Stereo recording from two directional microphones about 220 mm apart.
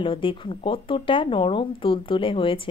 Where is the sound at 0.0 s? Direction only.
25° left (ahead or behind).